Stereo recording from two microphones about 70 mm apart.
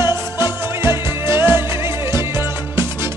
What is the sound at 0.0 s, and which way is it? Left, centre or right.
Music, right.